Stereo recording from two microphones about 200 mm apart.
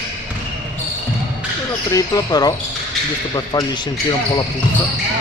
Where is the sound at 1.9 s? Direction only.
15° left (ahead or behind).